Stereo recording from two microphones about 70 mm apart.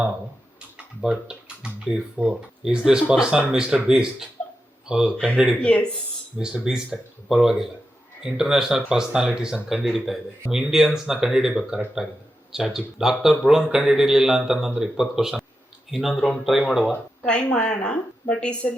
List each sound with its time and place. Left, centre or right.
1.0 s speech: centre
5.1 s speech: centre
6.3 s speech: centre
16.9 s speech: centre